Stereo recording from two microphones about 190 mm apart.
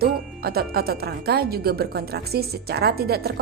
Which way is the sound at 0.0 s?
55° right (ahead or behind).